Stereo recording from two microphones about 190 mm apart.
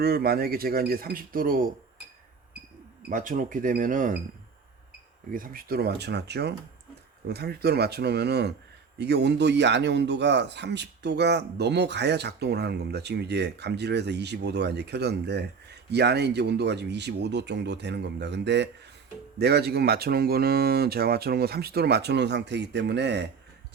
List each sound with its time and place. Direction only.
0.0 s speech: 55° right (ahead or behind)
3.1 s speech: 45° right (ahead or behind)
5.3 s a man's voice: 45° right (ahead or behind); by 23.3 s 65° right (ahead or behind)